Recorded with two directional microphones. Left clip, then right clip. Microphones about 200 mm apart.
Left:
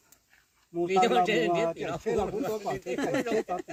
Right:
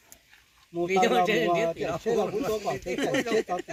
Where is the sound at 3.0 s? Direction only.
10° left (ahead or behind).